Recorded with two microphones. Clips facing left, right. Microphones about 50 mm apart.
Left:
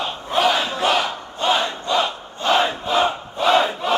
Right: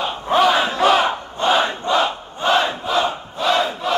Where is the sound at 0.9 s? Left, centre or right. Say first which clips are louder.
Right 4 dB; right.